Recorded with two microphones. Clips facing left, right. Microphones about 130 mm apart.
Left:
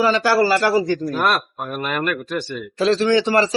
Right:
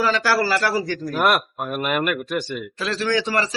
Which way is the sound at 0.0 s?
15° left (ahead or behind).